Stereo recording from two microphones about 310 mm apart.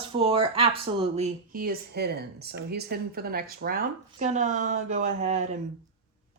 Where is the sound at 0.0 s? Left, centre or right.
Centre.